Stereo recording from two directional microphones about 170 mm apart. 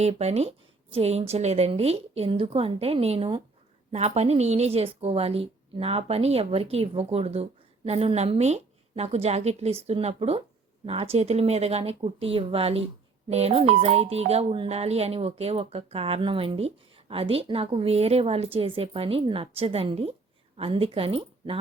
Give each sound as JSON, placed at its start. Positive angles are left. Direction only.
{"t": 0.0, "sound": "speech", "side_deg": -40}